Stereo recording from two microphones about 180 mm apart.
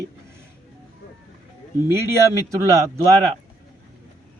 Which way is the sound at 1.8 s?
15° right (ahead or behind).